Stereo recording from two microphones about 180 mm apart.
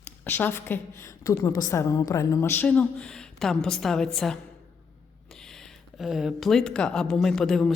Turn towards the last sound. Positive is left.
turn(degrees=5)  # may be behind; listen again after turning